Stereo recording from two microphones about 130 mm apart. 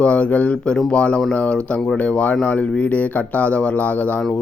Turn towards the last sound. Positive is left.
turn(degrees=5)  # may be behind; listen again after turning